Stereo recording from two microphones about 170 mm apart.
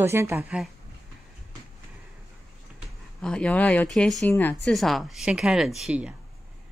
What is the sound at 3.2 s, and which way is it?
Speech, 5° left (ahead or behind).